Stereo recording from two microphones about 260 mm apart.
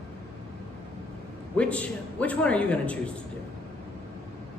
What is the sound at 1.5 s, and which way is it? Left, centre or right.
A man's voice, centre.